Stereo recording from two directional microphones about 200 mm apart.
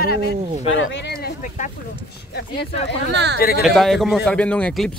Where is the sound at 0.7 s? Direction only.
60° left (ahead or behind).